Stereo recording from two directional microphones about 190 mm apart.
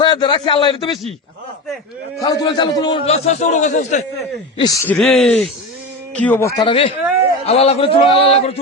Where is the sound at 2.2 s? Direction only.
20° left (ahead or behind); by 4.0 s 40° left (ahead or behind).